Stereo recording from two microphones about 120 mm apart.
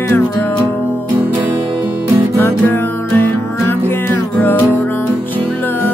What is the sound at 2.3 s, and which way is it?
Music, 20° left (ahead or behind).